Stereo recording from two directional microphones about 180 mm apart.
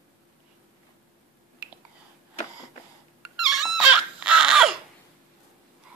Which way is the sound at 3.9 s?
5° right (ahead or behind).